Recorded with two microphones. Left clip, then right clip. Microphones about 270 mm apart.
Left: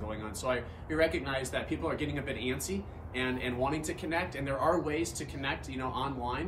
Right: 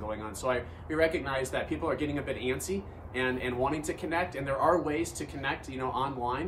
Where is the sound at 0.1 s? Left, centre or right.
Centre.